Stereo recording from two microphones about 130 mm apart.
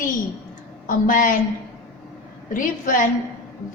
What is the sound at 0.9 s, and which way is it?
Speech, 90° left.